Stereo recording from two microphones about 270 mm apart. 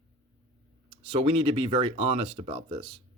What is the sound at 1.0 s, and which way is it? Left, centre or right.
Speech, right.